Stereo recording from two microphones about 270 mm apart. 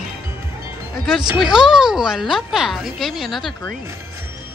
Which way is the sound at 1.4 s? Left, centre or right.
Centre.